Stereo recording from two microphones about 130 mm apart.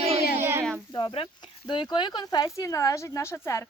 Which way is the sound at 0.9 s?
45° left (ahead or behind).